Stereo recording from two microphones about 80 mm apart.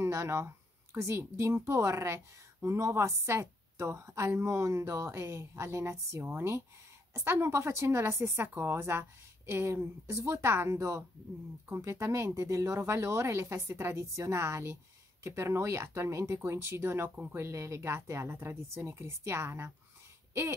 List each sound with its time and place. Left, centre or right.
0.0 s a woman's voice: right
17.4 s a woman's voice: right